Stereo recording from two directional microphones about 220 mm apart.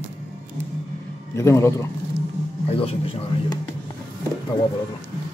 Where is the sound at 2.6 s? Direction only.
25° left (ahead or behind).